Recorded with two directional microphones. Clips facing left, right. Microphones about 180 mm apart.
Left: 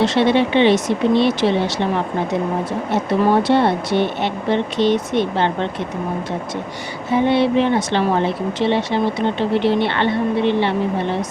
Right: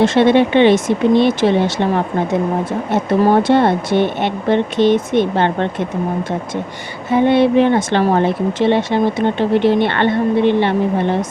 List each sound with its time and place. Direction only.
0.0 s speech: 50° right (ahead or behind)
2.9 s speech: 50° right (ahead or behind)
7.1 s speech: 50° right (ahead or behind)